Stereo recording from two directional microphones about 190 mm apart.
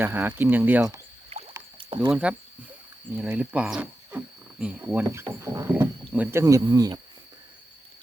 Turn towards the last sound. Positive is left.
turn(degrees=-20)  # may be behind; listen again after turning